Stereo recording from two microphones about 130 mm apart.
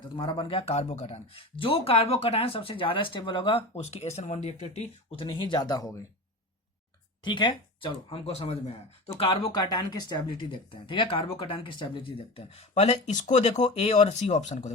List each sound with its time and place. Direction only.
0.2 s speech: 35° left (ahead or behind); by 5.2 s 55° left (ahead or behind)
5.2 s speech: 35° left (ahead or behind)
7.3 s speech: 35° left (ahead or behind); by 8.7 s 55° left (ahead or behind)
9.1 s speech: 40° left (ahead or behind); by 14.7 s 65° left (ahead or behind)